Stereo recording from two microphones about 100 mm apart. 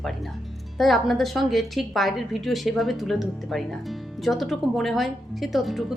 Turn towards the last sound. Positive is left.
turn(degrees=0)  # may be behind; listen again after turning